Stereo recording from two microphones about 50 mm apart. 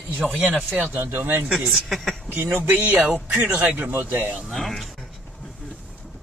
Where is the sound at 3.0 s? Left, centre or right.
Right.